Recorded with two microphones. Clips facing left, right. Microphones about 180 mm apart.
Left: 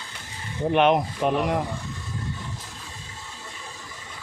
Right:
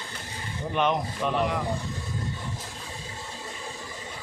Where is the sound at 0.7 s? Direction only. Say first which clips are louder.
Left 6 dB; 65° left (ahead or behind).